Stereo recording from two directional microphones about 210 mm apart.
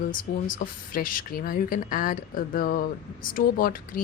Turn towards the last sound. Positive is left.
turn(degrees=45)  # may be behind; listen again after turning